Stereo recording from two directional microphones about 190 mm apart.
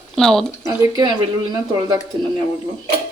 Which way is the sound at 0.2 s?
Centre (ahead or behind).